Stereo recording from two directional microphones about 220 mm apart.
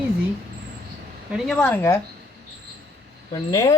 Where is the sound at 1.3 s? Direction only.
5° left (ahead or behind).